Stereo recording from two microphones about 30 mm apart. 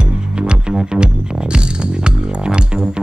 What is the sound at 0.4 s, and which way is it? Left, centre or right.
Music, right.